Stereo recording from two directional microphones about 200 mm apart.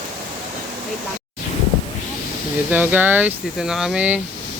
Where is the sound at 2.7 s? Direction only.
10° right (ahead or behind).